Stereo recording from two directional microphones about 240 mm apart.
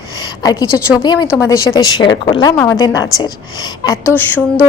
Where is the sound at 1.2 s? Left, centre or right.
Centre.